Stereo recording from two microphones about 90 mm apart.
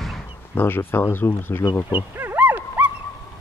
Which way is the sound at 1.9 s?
20° right (ahead or behind).